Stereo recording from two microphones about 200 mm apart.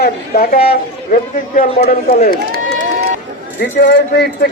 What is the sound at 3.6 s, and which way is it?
Speech, 50° left (ahead or behind).